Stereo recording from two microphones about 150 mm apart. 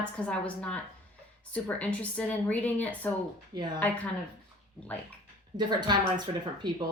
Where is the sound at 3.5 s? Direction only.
30° right (ahead or behind).